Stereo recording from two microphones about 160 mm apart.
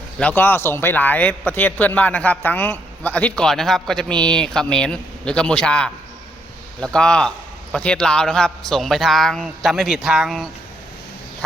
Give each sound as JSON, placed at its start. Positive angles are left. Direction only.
{"t": 0.2, "sound": "a man's voice", "side_deg": 10}